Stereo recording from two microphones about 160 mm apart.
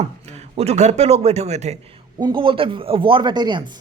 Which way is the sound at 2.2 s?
30° right (ahead or behind).